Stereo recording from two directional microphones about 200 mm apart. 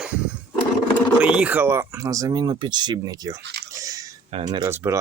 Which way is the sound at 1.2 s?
5° right (ahead or behind).